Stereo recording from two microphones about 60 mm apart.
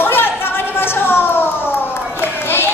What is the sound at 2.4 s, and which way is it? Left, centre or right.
Music, left.